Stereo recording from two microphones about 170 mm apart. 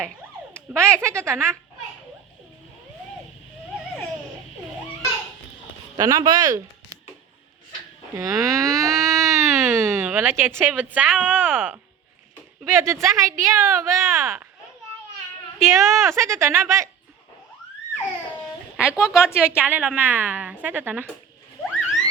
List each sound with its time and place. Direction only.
0.5 s speech: 5° left (ahead or behind)
0.9 s a woman's voice: 15° right (ahead or behind)
6.0 s speech: 20° right (ahead or behind)
8.1 s a woman's voice: 20° right (ahead or behind)
15.6 s a woman's voice: 15° right (ahead or behind)
18.8 s a woman's voice: 5° right (ahead or behind)